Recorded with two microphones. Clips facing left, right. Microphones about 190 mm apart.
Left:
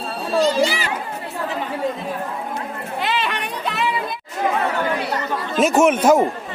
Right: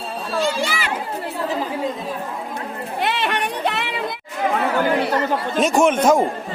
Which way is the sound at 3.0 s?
60° right (ahead or behind).